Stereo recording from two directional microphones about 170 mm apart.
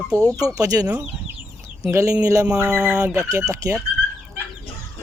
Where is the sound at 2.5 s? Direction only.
5° right (ahead or behind).